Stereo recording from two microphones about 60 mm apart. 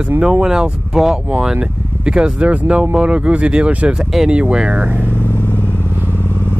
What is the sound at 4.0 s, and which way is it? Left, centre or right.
Speech, centre.